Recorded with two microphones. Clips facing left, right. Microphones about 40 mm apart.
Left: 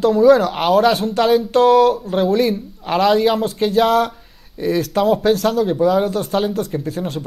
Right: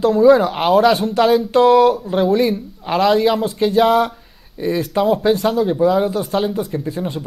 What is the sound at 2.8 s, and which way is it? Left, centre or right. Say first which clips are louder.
Speech: even; centre.